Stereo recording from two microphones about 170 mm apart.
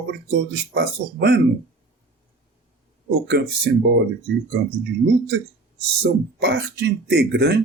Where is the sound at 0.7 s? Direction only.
75° right (ahead or behind).